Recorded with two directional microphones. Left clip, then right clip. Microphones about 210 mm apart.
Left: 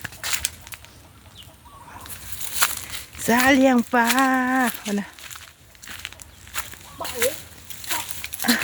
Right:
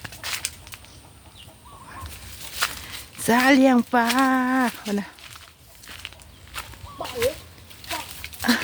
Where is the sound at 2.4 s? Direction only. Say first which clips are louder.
Left 3 dB; 45° left (ahead or behind).